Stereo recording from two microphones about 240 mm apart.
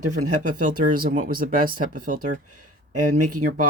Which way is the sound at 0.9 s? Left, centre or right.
Right.